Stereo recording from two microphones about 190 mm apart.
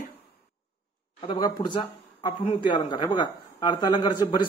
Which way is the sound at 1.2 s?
25° left (ahead or behind).